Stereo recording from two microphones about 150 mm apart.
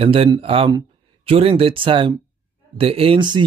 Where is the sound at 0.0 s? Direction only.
40° right (ahead or behind).